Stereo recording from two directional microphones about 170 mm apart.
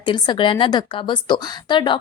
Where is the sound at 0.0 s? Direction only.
30° left (ahead or behind).